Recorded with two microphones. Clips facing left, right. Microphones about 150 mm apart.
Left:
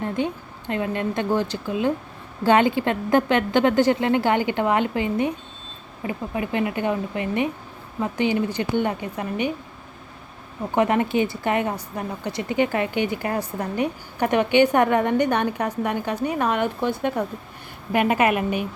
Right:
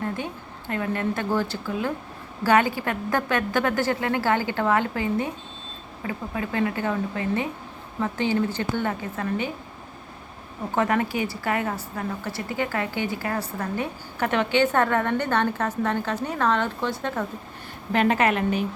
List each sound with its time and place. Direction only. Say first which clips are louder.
0.2 s a woman's voice: left 7 dB; 20° left (ahead or behind)
10.8 s a woman's voice: left 4 dB; 20° left (ahead or behind)